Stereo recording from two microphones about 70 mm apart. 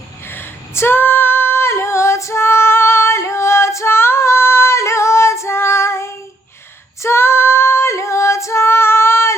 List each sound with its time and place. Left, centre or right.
0.3 s female singing: left